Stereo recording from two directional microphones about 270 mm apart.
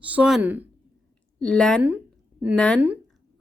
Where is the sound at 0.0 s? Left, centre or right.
Centre.